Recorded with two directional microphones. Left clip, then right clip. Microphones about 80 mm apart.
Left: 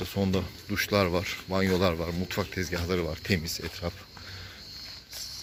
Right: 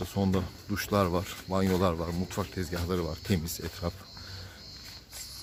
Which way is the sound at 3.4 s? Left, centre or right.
Right.